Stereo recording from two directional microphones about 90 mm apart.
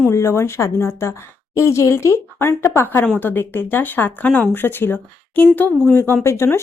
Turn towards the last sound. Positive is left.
turn(degrees=30)  # may be behind; listen again after turning